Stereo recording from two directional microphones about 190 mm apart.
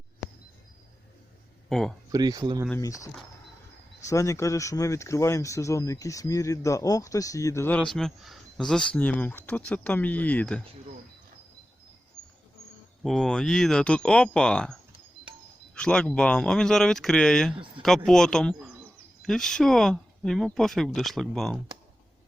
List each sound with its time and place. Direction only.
0.2 s a sound: centre (ahead or behind)
1.7 s speech: 5° left (ahead or behind)
2.1 s speech: 20° right (ahead or behind)
2.6 s speech: 15° left (ahead or behind)
13.0 s speech: centre (ahead or behind)